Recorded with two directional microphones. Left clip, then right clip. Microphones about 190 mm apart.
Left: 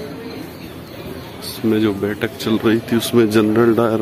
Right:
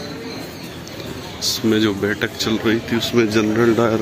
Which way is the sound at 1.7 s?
5° left (ahead or behind).